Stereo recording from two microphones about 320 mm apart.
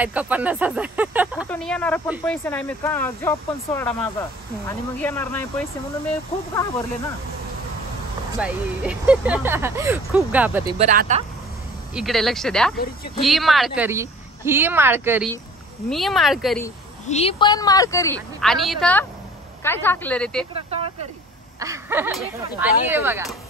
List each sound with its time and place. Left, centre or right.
0.0 s a woman's voice: centre
8.4 s speech: centre
10.8 s speech: right
11.9 s speech: centre
12.7 s speech: left
13.2 s speech: centre
17.1 s a woman's voice: centre
20.5 s speech: centre